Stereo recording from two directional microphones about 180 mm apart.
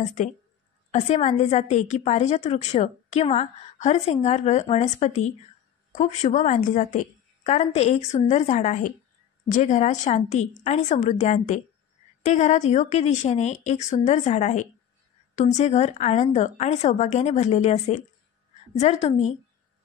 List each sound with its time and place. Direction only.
0.0 s a woman's voice: 40° left (ahead or behind)